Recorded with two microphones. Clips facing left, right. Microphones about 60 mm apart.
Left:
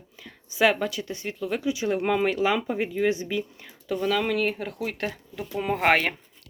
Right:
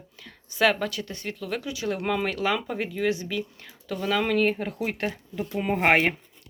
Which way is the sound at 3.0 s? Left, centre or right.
Left.